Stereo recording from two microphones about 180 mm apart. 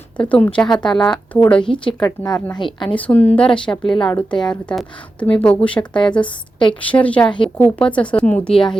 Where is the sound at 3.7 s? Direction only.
25° left (ahead or behind).